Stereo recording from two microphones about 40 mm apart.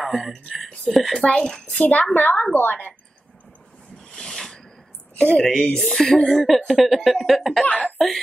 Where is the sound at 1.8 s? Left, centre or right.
Left.